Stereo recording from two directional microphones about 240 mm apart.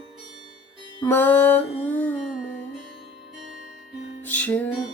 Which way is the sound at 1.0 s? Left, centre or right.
Centre.